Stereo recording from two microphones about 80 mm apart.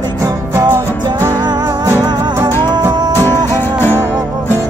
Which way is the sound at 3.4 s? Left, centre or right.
Left.